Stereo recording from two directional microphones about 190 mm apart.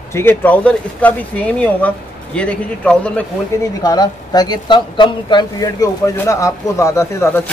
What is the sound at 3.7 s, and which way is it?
Speech, 20° left (ahead or behind).